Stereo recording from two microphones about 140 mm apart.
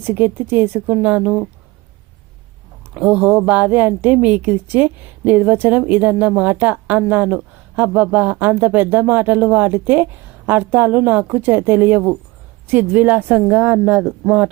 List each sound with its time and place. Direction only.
0.0 s a woman's voice: 15° right (ahead or behind)
2.9 s a woman's voice: 10° right (ahead or behind)